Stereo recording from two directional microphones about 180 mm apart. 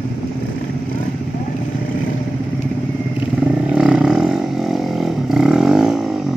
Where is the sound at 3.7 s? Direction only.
5° right (ahead or behind).